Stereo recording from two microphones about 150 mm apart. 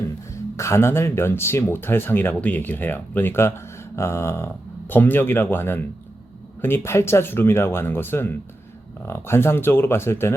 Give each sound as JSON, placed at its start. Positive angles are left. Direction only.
{"t": 0.5, "sound": "speech", "side_deg": 20}